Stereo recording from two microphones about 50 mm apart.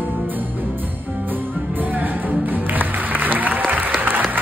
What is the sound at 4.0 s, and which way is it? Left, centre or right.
Applause, right.